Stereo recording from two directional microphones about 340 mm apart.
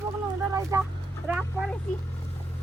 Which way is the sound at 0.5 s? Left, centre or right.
Centre.